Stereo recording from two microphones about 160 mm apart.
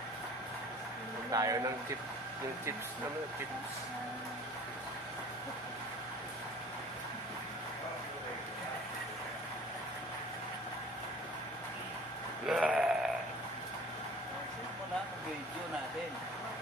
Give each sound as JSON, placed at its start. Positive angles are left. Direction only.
{"t": 1.3, "sound": "speech", "side_deg": -20}
{"t": 12.4, "sound": "sheep", "side_deg": -5}